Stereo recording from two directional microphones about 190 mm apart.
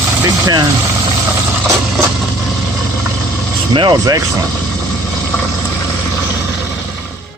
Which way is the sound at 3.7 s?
20° right (ahead or behind).